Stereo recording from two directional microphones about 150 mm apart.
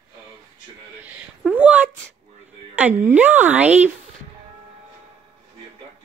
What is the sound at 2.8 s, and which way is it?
A woman's voice, 10° right (ahead or behind).